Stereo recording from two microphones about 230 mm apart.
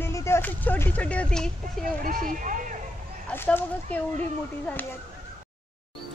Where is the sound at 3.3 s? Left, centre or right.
Centre.